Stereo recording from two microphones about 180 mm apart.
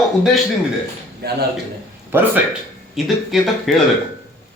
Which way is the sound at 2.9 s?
Centre (ahead or behind).